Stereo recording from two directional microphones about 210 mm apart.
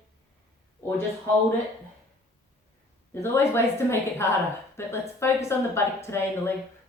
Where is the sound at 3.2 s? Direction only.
10° left (ahead or behind).